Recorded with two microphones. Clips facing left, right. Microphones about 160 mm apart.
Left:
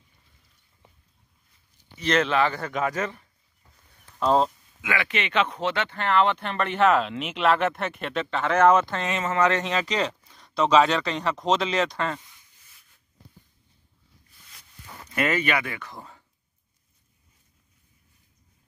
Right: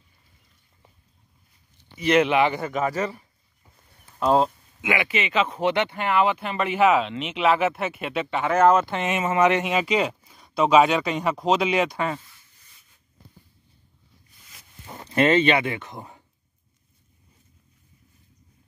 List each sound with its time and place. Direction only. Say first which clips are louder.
2.0 s speech: right 3 dB; 10° right (ahead or behind)
2.7 s speech: right 2 dB; 5° right (ahead or behind)
4.8 s speech: right 3 dB; 15° right (ahead or behind)
5.1 s speech: right 1 dB; centre (ahead or behind)
5.6 s speech: right 4 dB; 15° right (ahead or behind)
8.9 s speech: right 3 dB; 15° right (ahead or behind)
14.9 s speech: right 6 dB; 25° right (ahead or behind)